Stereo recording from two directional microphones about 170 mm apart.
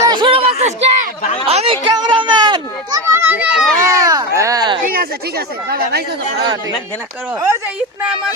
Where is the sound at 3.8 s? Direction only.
20° right (ahead or behind).